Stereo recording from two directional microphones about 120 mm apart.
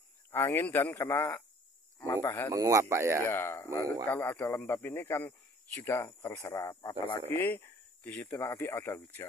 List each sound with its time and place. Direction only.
0.3 s speech: 20° left (ahead or behind)
2.5 s speech: 25° right (ahead or behind)
3.3 s speech: 20° left (ahead or behind)
7.3 s speech: 20° left (ahead or behind)